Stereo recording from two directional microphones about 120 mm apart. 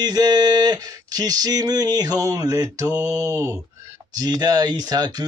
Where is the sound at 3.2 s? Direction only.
25° right (ahead or behind).